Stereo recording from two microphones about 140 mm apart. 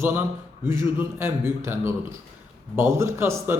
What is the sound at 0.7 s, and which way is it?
A man's voice, 20° right (ahead or behind).